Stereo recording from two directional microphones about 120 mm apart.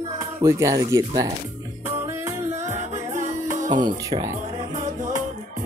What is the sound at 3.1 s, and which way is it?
Music, 90° right.